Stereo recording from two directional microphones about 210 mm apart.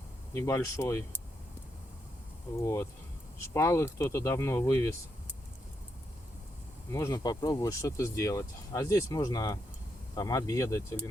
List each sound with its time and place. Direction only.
0.3 s speech: 15° left (ahead or behind)
2.6 s speech: 15° left (ahead or behind)
6.9 s speech: 15° left (ahead or behind)